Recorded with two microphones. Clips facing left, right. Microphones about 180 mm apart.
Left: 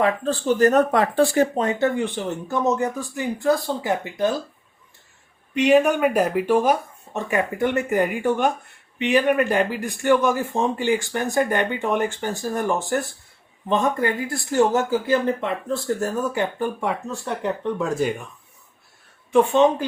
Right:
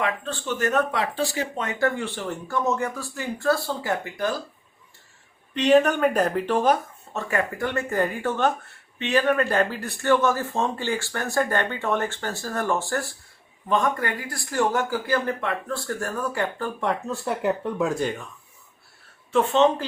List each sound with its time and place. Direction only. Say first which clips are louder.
0.0 s speech: left 7 dB; 35° left (ahead or behind); by 1.5 s 50° left (ahead or behind)
1.8 s speech: left 3 dB; 20° left (ahead or behind)
5.5 s speech: left 2 dB; 10° left (ahead or behind)
16.9 s speech: right 1 dB; centre (ahead or behind)
19.3 s speech: left 3 dB; 15° left (ahead or behind)